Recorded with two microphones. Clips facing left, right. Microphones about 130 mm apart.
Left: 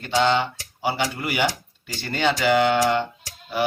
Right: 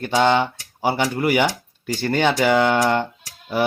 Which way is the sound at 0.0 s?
50° right (ahead or behind).